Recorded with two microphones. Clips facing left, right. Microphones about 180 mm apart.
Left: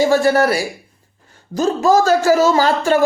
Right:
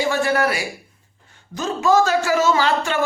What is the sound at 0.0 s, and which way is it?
Speech, 40° left (ahead or behind).